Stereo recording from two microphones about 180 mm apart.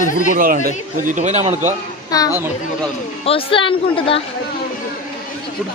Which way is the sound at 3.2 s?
30° left (ahead or behind).